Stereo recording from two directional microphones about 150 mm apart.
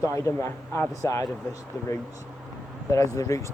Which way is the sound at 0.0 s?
20° left (ahead or behind).